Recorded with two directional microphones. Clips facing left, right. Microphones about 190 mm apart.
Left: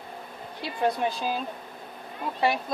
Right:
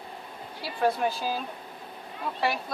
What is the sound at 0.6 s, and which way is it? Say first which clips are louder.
Speech: even; 20° left (ahead or behind).